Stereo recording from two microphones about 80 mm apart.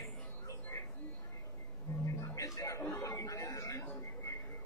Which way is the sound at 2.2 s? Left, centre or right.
Left.